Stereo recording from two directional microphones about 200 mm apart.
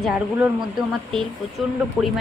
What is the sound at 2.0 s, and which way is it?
Speech, 5° right (ahead or behind).